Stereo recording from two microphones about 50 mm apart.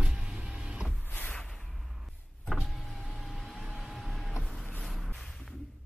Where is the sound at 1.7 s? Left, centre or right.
Centre.